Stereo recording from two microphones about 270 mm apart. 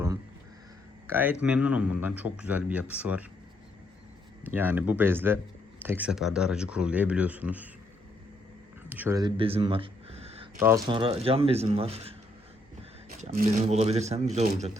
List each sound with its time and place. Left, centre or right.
1.0 s speech: centre
4.4 s speech: centre
8.9 s a sound: centre
10.6 s speech: centre